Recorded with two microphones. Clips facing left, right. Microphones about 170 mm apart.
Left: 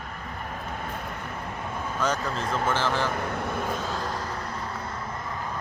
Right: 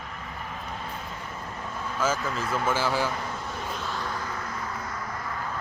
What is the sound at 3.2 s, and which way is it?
Vehicle, 60° left (ahead or behind).